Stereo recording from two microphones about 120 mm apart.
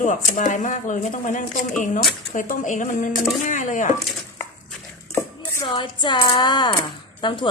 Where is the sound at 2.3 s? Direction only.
90° left.